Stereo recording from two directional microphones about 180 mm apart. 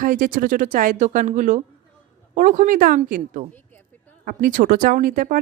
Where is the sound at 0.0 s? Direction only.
50° right (ahead or behind).